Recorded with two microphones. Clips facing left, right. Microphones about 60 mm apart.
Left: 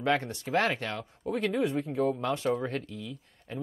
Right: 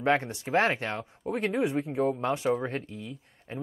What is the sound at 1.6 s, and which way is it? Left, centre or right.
Speech, centre.